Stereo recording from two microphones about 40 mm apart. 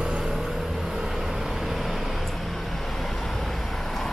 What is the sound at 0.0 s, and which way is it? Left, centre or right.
Vehicle, centre.